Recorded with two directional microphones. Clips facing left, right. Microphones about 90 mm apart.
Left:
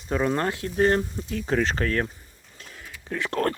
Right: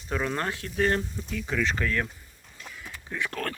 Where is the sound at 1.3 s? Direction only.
50° left (ahead or behind).